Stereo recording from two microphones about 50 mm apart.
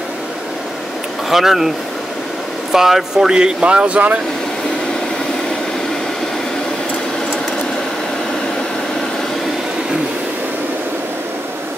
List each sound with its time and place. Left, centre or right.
1.3 s speech: centre
2.7 s speech: centre; by 4.2 s right